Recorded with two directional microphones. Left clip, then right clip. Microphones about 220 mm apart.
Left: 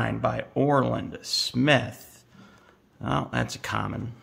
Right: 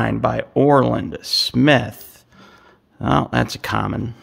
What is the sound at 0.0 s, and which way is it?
Speech, 45° right (ahead or behind).